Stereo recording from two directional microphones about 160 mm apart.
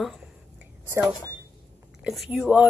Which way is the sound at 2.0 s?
Centre (ahead or behind).